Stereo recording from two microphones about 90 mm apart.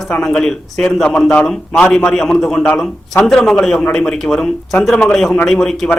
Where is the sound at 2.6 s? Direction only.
15° left (ahead or behind).